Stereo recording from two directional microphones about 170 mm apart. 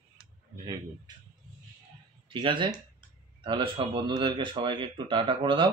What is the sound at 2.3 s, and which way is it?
Speech, 30° right (ahead or behind).